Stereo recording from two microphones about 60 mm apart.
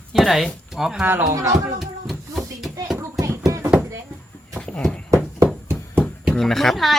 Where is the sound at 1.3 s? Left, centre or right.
Right.